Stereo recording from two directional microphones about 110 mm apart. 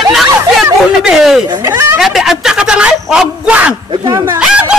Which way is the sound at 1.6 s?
20° right (ahead or behind).